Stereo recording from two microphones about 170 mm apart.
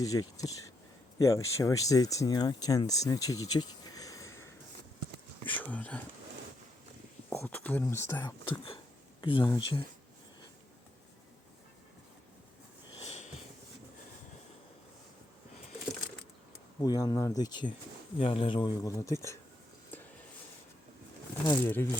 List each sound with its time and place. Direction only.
0.0 s speech: 20° left (ahead or behind)
5.6 s speech: 10° left (ahead or behind)
7.3 s speech: 10° left (ahead or behind)
8.4 s a sound: 30° left (ahead or behind)
13.0 s sniff: 40° left (ahead or behind)
16.8 s speech: 20° left (ahead or behind)
21.4 s speech: 20° left (ahead or behind)